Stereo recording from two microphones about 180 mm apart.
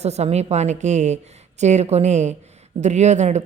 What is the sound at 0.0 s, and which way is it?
A woman's voice, 35° right (ahead or behind).